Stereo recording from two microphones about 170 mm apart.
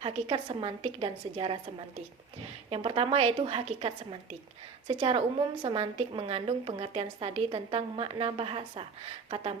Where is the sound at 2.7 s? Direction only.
35° right (ahead or behind).